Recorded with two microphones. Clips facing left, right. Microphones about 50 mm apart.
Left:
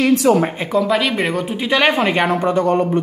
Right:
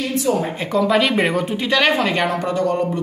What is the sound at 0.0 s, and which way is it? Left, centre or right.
Speech, left.